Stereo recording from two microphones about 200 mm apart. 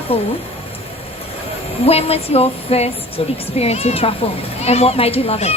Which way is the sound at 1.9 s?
30° left (ahead or behind).